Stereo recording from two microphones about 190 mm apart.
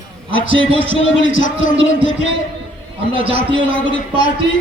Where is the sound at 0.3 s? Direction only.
90° left.